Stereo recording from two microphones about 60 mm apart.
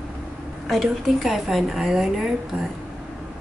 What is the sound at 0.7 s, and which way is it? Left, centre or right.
Speech, centre.